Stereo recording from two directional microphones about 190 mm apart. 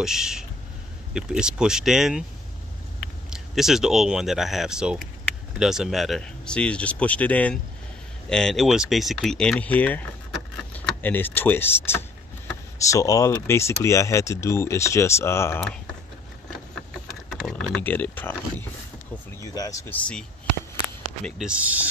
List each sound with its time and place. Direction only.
0.0 s speech: 5° right (ahead or behind)
3.3 s speech: centre (ahead or behind); by 15.6 s 15° left (ahead or behind)
17.3 s typing: centre (ahead or behind)
17.8 s speech: 10° left (ahead or behind)
19.9 s speech: 5° left (ahead or behind)